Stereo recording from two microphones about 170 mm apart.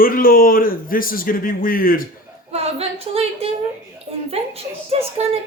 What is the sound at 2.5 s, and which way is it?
Speech, 35° right (ahead or behind).